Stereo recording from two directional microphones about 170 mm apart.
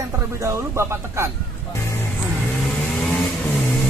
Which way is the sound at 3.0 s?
5° left (ahead or behind).